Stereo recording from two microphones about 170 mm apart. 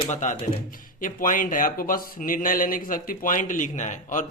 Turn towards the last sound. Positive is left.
turn(degrees=45)  # may be behind; listen again after turning